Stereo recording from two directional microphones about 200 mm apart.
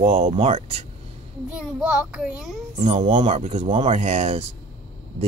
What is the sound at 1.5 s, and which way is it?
A child's voice, 5° right (ahead or behind).